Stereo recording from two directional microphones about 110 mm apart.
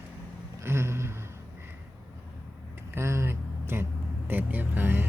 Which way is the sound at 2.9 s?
25° right (ahead or behind).